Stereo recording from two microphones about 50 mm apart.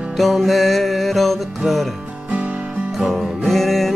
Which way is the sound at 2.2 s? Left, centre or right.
Right.